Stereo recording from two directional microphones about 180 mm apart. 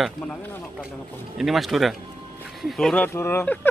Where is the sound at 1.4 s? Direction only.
Centre (ahead or behind).